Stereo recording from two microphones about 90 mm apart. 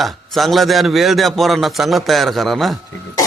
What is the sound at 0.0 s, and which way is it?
A man's voice, centre (ahead or behind).